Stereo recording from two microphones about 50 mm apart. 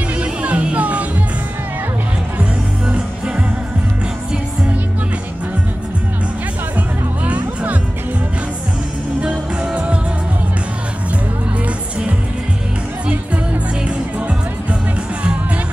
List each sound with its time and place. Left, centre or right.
0.2 s music: right
7.2 s music: right
9.2 s music: right
13.8 s music: right